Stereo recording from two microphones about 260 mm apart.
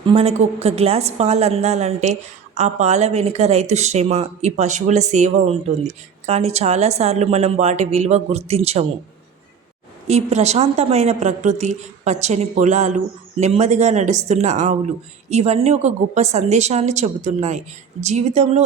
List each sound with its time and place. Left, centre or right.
0.0 s speech: right
10.1 s speech: right